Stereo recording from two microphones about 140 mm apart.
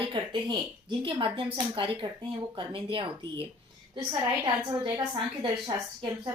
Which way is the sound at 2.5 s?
35° right (ahead or behind).